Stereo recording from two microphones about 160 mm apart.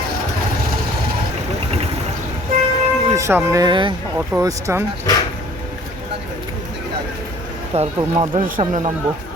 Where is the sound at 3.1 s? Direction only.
20° right (ahead or behind).